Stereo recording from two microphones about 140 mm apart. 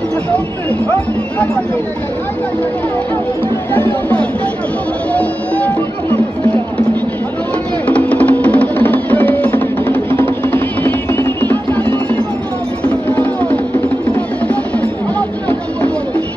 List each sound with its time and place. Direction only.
3.7 s speech: 10° left (ahead or behind)
7.8 s music: 10° left (ahead or behind)
14.5 s music: 10° left (ahead or behind)